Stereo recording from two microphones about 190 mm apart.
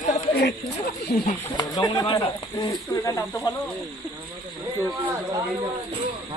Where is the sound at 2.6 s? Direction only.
15° left (ahead or behind).